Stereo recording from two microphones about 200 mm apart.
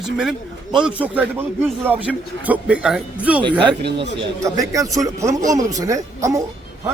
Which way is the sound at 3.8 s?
60° right (ahead or behind).